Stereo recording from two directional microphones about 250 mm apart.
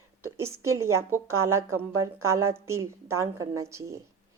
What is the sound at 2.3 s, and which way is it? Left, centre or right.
A woman's voice, centre.